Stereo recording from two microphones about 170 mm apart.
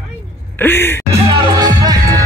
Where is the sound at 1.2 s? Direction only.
30° right (ahead or behind).